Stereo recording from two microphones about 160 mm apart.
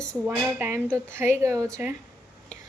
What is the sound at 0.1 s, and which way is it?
A woman's voice, 15° right (ahead or behind).